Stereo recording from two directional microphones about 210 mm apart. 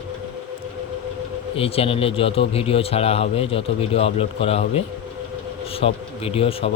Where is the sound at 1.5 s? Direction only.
25° left (ahead or behind).